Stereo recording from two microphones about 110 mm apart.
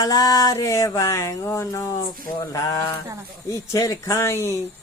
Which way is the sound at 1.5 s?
25° left (ahead or behind).